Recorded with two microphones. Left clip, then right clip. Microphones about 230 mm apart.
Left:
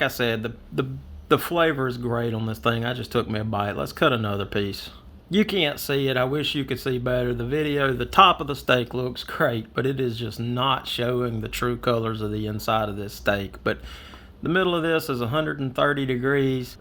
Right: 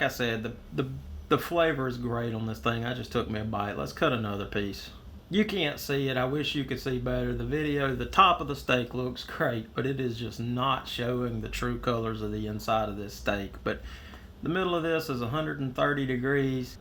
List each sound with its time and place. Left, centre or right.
0.0 s speech: left